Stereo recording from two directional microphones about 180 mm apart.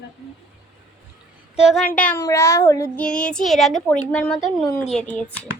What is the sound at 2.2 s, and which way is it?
Speech, 15° left (ahead or behind).